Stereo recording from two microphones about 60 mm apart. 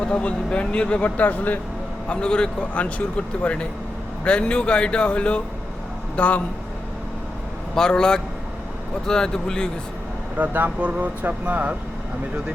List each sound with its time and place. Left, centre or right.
0.0 s speech: centre
2.0 s speech: centre
7.8 s speech: centre
10.3 s speech: right